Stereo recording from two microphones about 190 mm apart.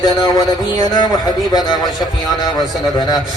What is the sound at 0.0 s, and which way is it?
Speech, 20° left (ahead or behind).